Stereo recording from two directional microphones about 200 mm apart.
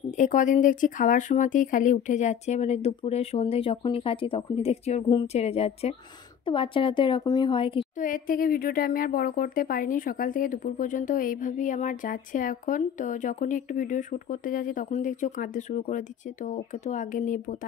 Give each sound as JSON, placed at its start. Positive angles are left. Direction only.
{"t": 0.2, "sound": "a woman's voice", "side_deg": 40}
{"t": 8.0, "sound": "speech", "side_deg": 45}